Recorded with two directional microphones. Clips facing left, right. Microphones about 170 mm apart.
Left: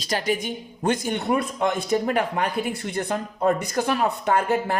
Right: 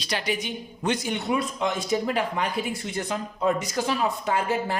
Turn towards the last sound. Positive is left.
turn(degrees=55)  # may be behind; listen again after turning